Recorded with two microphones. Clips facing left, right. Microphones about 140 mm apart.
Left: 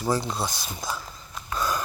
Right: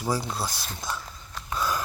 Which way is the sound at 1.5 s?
Centre (ahead or behind).